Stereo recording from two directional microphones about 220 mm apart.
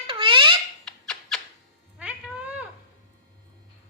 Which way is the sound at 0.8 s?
5° left (ahead or behind).